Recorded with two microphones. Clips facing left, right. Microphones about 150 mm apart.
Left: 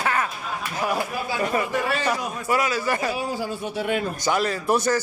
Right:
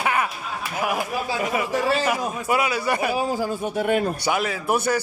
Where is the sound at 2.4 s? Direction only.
15° right (ahead or behind).